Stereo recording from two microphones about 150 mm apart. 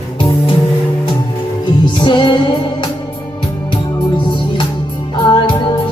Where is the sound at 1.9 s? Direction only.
35° left (ahead or behind).